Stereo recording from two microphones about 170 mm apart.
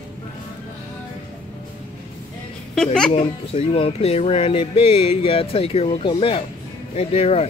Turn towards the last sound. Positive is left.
turn(degrees=35)  # may be behind; listen again after turning